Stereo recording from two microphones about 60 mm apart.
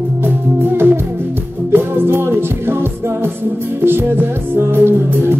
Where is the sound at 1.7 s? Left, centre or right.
Right.